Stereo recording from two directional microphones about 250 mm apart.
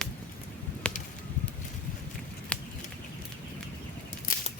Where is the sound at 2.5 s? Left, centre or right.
Centre.